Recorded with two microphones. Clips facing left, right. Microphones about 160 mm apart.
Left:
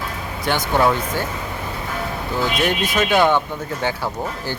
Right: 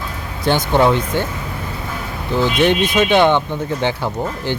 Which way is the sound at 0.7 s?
25° right (ahead or behind).